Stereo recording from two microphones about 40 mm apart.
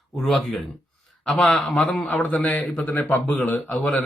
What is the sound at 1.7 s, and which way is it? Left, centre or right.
Speech, left.